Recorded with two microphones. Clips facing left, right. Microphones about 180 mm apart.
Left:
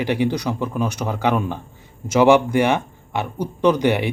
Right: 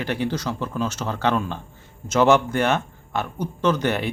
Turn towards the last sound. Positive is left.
turn(degrees=15)  # may be behind; listen again after turning